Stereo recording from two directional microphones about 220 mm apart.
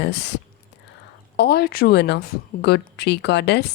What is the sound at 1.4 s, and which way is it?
Speech, 45° left (ahead or behind).